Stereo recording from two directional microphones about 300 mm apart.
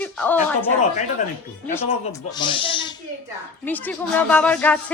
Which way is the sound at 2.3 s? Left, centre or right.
Centre.